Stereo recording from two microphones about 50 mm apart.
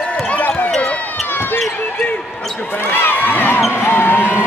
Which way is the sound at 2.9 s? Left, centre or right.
Left.